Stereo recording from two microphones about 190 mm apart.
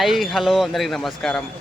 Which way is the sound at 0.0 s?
Centre (ahead or behind).